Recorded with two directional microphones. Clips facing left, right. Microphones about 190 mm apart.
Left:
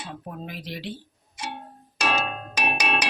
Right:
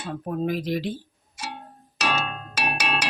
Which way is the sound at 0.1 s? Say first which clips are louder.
Right 15 dB; 45° right (ahead or behind).